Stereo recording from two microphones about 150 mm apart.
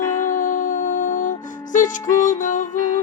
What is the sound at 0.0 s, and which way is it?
Music, 20° left (ahead or behind).